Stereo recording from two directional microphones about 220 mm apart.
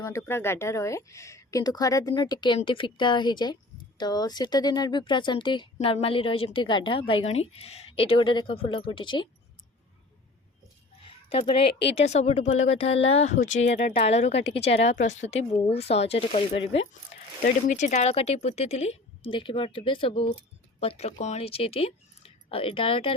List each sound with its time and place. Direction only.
0.0 s speech: 15° left (ahead or behind)
11.0 s a sound: 25° left (ahead or behind)
12.0 s speech: 30° left (ahead or behind)